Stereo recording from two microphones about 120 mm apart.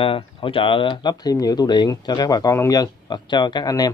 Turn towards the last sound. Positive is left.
turn(degrees=30)  # may be behind; listen again after turning